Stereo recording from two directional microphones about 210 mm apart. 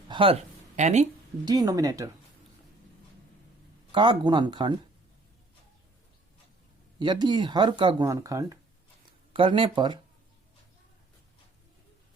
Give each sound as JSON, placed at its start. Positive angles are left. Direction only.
{"t": 0.1, "sound": "a sound", "side_deg": -25}
{"t": 0.8, "sound": "speech", "side_deg": -35}
{"t": 1.5, "sound": "speech", "side_deg": -15}
{"t": 3.9, "sound": "speech", "side_deg": -20}
{"t": 7.0, "sound": "speech", "side_deg": -20}